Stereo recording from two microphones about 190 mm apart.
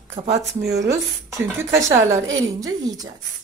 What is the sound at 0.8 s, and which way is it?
Speech, 15° right (ahead or behind).